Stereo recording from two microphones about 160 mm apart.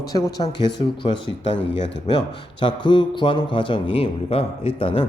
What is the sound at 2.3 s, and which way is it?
A man's voice, 30° left (ahead or behind).